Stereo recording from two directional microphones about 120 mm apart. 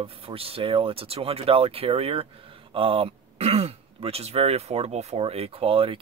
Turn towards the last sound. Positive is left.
turn(degrees=-50)  # may be behind; listen again after turning